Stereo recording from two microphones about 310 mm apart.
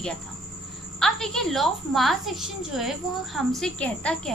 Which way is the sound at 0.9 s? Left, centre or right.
Centre.